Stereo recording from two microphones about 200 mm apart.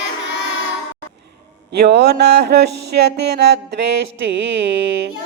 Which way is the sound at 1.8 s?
55° right (ahead or behind).